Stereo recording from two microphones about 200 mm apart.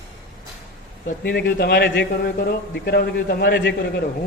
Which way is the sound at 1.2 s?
55° left (ahead or behind).